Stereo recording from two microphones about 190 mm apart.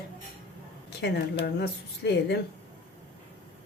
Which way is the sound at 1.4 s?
60° left (ahead or behind).